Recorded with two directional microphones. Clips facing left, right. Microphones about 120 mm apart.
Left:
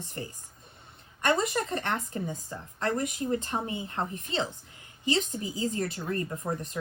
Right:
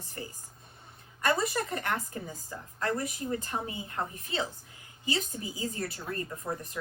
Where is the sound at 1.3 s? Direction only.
25° left (ahead or behind).